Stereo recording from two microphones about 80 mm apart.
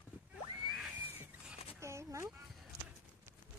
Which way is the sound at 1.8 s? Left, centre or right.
Right.